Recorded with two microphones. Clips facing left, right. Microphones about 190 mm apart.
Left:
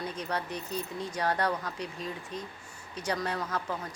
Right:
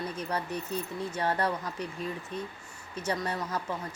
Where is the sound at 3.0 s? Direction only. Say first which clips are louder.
Even; 5° right (ahead or behind).